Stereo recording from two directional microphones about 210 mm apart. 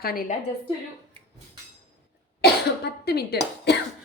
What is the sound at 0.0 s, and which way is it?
Speech, 45° left (ahead or behind).